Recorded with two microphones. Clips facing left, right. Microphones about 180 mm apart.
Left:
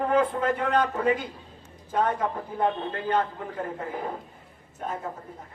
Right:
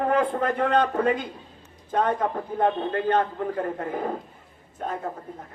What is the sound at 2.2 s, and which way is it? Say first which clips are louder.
A man's voice: right 3 dB; 50° right (ahead or behind).